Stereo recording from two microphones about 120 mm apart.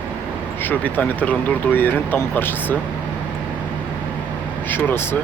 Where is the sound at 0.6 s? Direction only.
15° left (ahead or behind).